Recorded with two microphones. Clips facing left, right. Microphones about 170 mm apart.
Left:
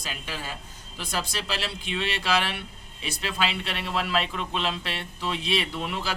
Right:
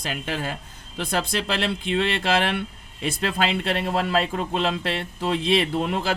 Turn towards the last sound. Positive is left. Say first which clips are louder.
# right 7 dB
turn(degrees=-50)  # may be behind; listen again after turning